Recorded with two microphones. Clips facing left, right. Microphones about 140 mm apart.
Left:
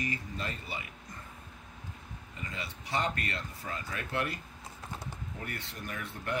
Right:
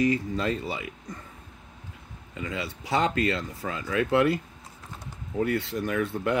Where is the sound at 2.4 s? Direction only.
85° right.